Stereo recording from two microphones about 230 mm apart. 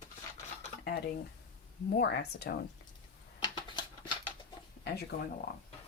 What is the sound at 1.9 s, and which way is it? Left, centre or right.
Speech, left.